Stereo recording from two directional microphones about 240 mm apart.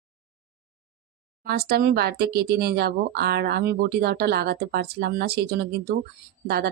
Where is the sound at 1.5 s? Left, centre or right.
Right.